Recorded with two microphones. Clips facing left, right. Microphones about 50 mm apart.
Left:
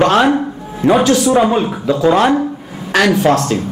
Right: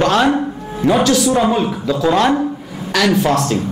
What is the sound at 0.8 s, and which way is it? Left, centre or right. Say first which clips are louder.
Speech: left 2 dB; centre.